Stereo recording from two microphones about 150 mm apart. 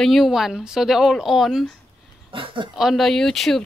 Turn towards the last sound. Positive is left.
turn(degrees=0)  # may be behind; listen again after turning